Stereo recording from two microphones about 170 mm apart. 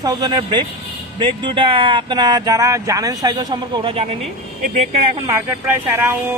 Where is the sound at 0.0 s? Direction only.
25° right (ahead or behind).